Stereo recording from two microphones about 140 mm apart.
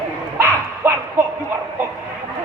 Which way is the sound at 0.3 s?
20° right (ahead or behind).